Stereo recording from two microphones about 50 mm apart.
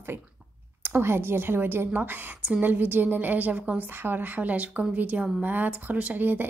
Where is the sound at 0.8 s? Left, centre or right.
Right.